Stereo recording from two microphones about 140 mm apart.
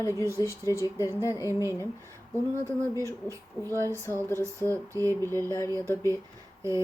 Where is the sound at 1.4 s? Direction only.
20° right (ahead or behind).